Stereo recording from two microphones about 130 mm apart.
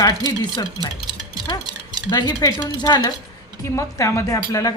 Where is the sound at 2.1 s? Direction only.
25° left (ahead or behind).